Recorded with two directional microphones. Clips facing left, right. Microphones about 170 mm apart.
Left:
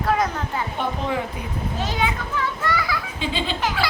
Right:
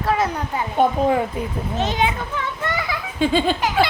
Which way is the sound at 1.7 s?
20° right (ahead or behind).